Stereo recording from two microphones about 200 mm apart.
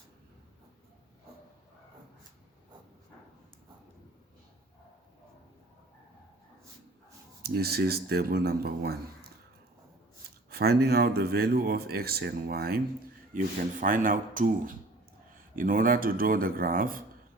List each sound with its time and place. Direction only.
7.4 s speech: 50° right (ahead or behind)
10.5 s speech: 50° right (ahead or behind)